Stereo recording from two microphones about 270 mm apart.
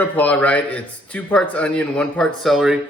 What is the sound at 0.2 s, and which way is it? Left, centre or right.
Speech, centre.